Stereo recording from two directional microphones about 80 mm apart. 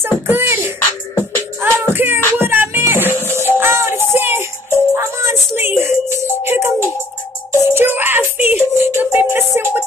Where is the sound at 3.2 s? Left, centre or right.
Left.